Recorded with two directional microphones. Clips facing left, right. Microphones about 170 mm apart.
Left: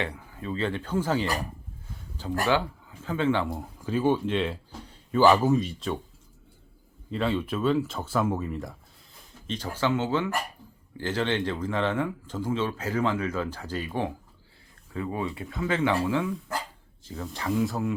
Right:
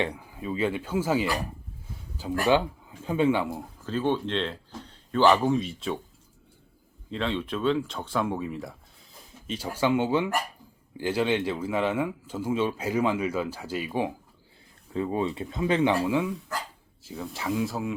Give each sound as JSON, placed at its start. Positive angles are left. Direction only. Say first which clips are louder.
{"t": 0.0, "sound": "a man's voice", "louder": "right 3 dB", "side_deg": -15}
{"t": 2.5, "sound": "a man's voice", "louder": "right 4 dB", "side_deg": -15}
{"t": 3.6, "sound": "speech", "louder": "left 2 dB", "side_deg": 10}
{"t": 7.1, "sound": "a man's voice", "louder": "left 2 dB", "side_deg": 5}
{"t": 14.9, "sound": "speech", "louder": "right 4 dB", "side_deg": -25}